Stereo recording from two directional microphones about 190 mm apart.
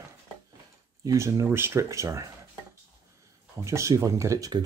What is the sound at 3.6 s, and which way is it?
Speech, 15° right (ahead or behind).